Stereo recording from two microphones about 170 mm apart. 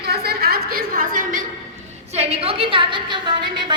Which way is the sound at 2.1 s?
35° right (ahead or behind).